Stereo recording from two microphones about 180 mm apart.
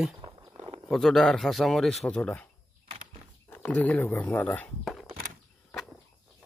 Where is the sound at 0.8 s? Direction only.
Centre (ahead or behind).